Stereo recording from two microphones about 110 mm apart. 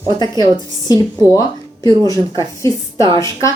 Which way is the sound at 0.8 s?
35° left (ahead or behind).